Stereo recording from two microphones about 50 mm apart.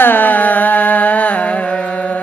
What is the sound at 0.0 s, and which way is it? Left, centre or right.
Music, left.